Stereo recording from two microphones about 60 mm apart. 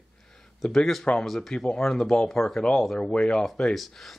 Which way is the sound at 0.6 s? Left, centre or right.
Centre.